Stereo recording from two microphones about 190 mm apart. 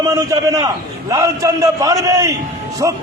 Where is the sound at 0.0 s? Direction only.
15° right (ahead or behind).